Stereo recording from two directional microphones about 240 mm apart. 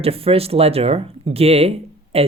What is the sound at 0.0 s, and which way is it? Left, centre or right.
Speech, right.